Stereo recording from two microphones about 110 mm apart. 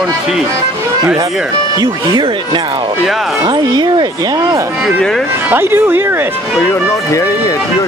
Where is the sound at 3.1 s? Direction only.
Centre (ahead or behind).